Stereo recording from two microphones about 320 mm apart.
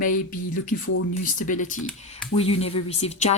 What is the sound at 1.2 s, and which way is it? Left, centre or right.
Speech, left.